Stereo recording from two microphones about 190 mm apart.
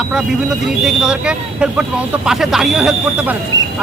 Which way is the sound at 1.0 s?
5° right (ahead or behind).